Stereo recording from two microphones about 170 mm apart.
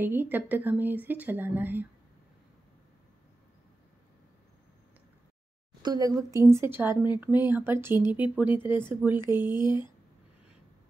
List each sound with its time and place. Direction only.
0.0 s speech: 10° right (ahead or behind)
5.8 s speech: 25° right (ahead or behind)
9.6 s speech: 25° left (ahead or behind)